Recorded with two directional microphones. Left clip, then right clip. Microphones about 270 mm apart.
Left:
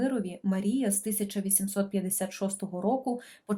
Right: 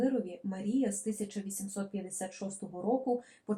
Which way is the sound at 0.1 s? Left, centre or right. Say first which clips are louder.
Left 3 dB; left.